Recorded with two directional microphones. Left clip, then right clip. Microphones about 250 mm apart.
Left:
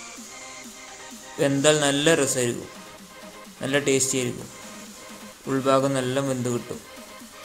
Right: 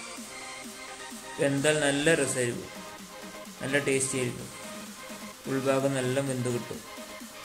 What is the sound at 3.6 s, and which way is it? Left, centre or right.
Speech, centre.